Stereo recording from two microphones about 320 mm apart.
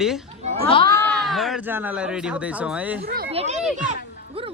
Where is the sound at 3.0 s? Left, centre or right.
Right.